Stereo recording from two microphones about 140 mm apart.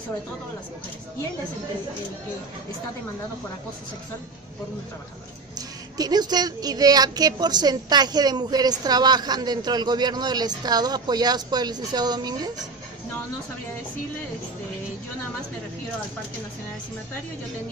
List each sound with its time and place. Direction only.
5.5 s speech: 30° right (ahead or behind)